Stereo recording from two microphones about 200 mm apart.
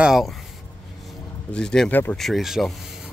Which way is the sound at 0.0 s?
Centre (ahead or behind).